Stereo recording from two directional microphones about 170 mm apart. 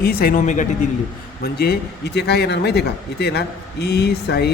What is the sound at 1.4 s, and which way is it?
A man's voice, 70° left (ahead or behind).